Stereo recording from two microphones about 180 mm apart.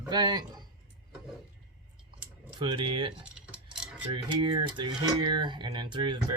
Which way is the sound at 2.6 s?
25° right (ahead or behind).